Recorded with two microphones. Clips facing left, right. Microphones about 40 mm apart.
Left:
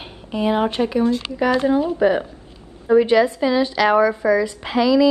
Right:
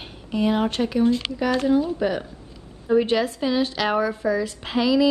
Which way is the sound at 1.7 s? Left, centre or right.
Left.